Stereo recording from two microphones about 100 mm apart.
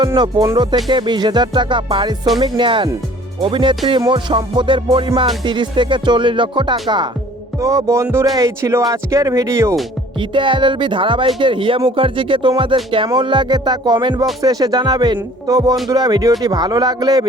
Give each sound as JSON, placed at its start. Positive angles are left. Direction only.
{"t": 0.2, "sound": "music", "side_deg": -50}
{"t": 5.4, "sound": "music", "side_deg": -50}
{"t": 7.6, "sound": "speech", "side_deg": -30}
{"t": 10.2, "sound": "music", "side_deg": -55}
{"t": 14.4, "sound": "speech", "side_deg": -40}